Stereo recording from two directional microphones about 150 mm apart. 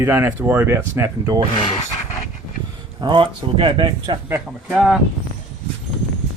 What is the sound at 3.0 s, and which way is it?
Speech, 35° right (ahead or behind).